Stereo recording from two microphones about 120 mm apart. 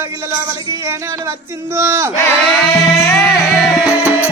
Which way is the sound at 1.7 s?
20° right (ahead or behind).